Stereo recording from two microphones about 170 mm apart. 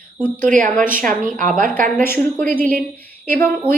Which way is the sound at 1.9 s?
10° left (ahead or behind).